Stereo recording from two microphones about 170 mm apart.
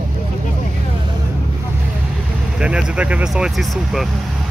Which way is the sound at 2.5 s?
5° right (ahead or behind).